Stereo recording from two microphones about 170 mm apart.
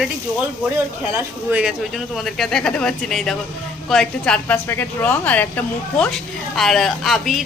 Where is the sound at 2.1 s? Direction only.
Centre (ahead or behind).